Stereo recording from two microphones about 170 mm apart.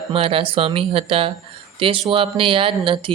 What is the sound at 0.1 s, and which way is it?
Speech, 35° right (ahead or behind).